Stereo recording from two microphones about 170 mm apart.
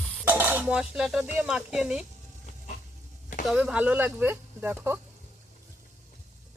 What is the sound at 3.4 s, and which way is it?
Speech, 5° right (ahead or behind).